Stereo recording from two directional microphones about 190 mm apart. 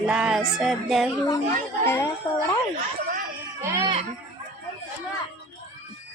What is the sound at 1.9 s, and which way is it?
Speech, 15° left (ahead or behind).